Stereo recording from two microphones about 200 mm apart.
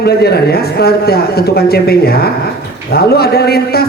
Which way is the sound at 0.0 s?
55° left (ahead or behind).